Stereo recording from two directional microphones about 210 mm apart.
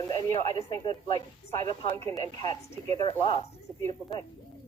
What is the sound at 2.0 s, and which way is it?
Speech, 15° left (ahead or behind).